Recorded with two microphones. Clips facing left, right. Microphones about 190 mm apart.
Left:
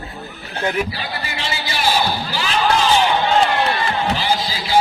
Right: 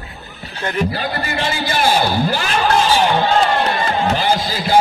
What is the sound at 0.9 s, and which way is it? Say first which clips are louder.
A man's voice: right 6 dB; 50° right (ahead or behind).